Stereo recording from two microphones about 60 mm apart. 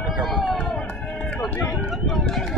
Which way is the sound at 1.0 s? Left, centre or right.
Centre.